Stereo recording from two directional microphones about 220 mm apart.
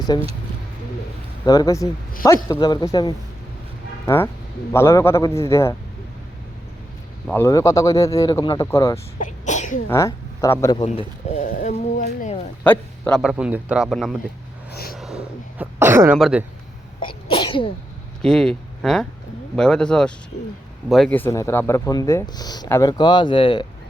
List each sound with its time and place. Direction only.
0.1 s speech: 20° left (ahead or behind)
1.5 s speech: 15° left (ahead or behind)
7.3 s speech: 10° left (ahead or behind)
9.1 s speech: 35° left (ahead or behind)
9.9 s speech: 15° left (ahead or behind)
10.8 s speech: 35° left (ahead or behind)
12.6 s a man's voice: 5° left (ahead or behind)
14.7 s a sound: 45° left (ahead or behind)
14.9 s a sound: centre (ahead or behind)
16.1 s a man's voice: centre (ahead or behind)
17.0 s sneeze: 25° left (ahead or behind)
18.2 s a man's voice: 5° left (ahead or behind); by 23.6 s 20° left (ahead or behind)